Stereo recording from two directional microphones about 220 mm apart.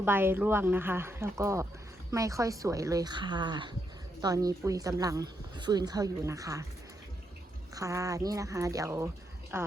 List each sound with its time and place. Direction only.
0.0 s a woman's voice: 10° right (ahead or behind)
7.8 s a woman's voice: 15° right (ahead or behind)